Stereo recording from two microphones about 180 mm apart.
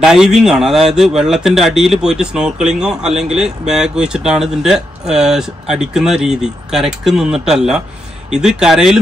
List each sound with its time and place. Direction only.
0.0 s speech: 5° right (ahead or behind)